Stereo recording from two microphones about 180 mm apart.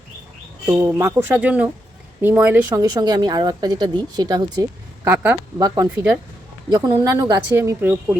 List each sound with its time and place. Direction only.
0.6 s speech: 10° right (ahead or behind)
2.8 s speech: 20° right (ahead or behind)